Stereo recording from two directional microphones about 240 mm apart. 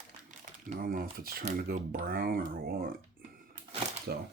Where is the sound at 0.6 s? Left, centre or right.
Right.